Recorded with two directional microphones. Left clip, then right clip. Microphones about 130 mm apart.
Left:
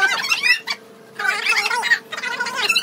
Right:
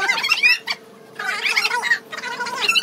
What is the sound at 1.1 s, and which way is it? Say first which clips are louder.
Cat: left 4 dB; 25° left (ahead or behind).